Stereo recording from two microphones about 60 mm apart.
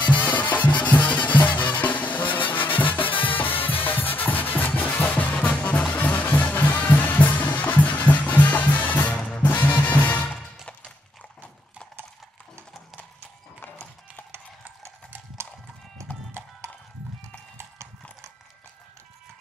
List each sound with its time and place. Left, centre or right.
0.1 s music: left